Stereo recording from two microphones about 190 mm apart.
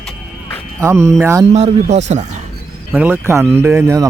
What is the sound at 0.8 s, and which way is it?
Speech, 15° right (ahead or behind).